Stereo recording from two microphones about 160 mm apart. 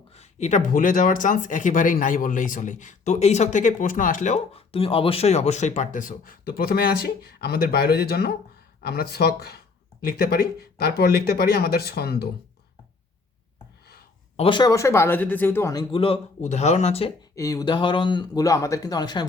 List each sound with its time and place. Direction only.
0.1 s speech: 45° left (ahead or behind); by 9.6 s 80° left
10.0 s speech: 70° left (ahead or behind)
14.3 s speech: 35° left (ahead or behind)
14.7 s speech: 20° left (ahead or behind); by 17.1 s 40° left (ahead or behind)
17.3 s speech: 20° left (ahead or behind)